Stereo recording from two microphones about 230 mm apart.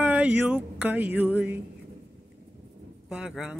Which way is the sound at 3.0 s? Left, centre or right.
Centre.